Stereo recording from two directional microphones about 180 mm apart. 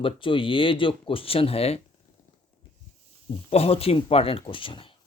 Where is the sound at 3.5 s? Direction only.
35° left (ahead or behind).